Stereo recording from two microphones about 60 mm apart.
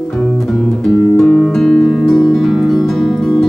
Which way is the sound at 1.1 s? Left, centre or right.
Centre.